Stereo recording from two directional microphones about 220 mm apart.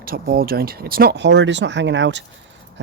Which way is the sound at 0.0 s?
40° right (ahead or behind).